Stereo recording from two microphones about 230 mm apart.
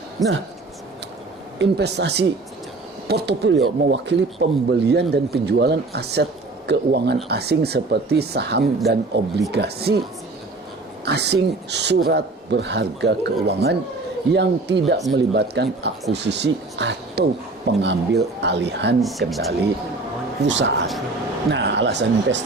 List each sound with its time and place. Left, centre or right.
0.2 s speech: centre
1.5 s speech: right
11.0 s speech: right
18.9 s speech: centre
20.4 s speech: right